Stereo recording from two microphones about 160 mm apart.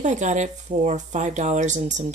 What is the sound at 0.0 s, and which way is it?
Speech, 50° right (ahead or behind).